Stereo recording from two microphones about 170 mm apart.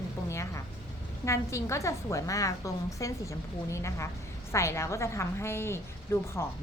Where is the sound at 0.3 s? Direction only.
15° left (ahead or behind).